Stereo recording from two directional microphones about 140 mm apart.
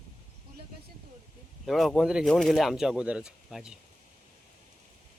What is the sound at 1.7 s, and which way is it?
Speech, centre (ahead or behind).